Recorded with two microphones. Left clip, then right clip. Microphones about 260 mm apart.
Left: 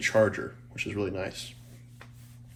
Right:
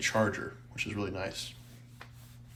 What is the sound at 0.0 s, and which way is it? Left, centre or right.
Speech, centre.